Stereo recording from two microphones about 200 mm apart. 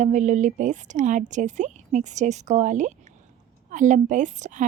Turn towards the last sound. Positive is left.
turn(degrees=-40)  # may be behind; listen again after turning